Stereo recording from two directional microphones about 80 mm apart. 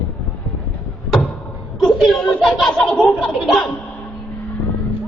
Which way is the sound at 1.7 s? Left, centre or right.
Centre.